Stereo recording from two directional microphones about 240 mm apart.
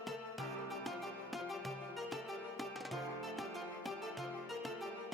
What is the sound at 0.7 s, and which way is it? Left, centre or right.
Music, centre.